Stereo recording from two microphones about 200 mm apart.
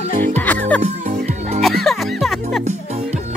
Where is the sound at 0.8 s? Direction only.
35° right (ahead or behind).